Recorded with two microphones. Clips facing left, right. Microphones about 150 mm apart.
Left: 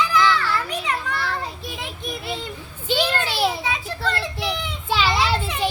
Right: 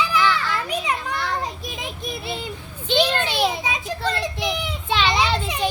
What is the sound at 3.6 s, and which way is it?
Children playing, 20° right (ahead or behind).